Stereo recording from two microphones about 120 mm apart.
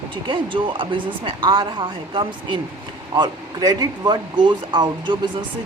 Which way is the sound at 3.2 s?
30° right (ahead or behind).